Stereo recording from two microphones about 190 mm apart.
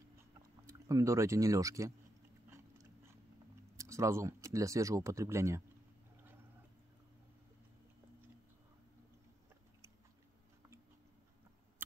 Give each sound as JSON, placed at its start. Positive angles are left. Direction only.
{"t": 0.7, "sound": "speech", "side_deg": -15}
{"t": 3.7, "sound": "speech", "side_deg": -15}